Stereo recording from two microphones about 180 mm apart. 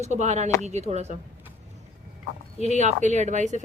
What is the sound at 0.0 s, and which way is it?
A woman's voice, 40° right (ahead or behind).